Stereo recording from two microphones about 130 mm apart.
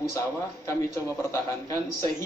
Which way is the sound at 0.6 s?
20° left (ahead or behind).